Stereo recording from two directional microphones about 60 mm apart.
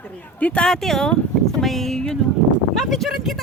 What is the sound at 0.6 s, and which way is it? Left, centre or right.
Speech, centre.